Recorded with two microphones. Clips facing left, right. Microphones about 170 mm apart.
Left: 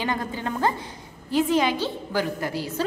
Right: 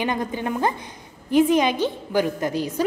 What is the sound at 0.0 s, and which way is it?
A woman's voice, 20° right (ahead or behind).